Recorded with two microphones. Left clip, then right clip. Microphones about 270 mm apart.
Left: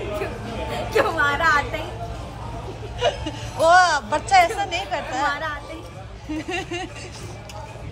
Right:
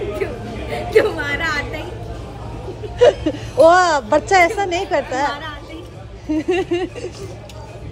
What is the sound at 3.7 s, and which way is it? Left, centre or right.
A woman's voice, centre.